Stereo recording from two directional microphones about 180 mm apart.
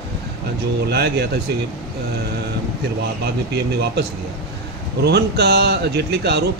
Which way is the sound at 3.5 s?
65° right (ahead or behind).